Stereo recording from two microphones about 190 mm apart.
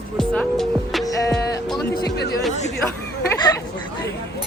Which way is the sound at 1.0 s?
15° left (ahead or behind).